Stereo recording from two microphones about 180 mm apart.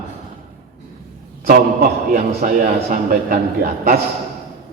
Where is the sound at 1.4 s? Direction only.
55° right (ahead or behind).